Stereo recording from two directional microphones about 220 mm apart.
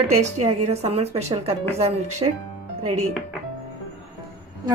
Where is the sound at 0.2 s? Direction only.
30° right (ahead or behind).